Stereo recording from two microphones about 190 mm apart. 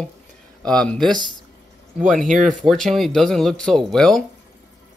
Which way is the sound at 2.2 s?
40° right (ahead or behind).